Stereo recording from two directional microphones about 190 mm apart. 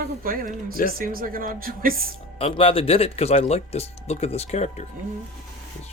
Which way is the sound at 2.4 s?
30° left (ahead or behind).